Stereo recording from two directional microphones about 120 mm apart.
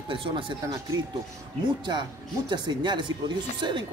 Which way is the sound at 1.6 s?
40° right (ahead or behind).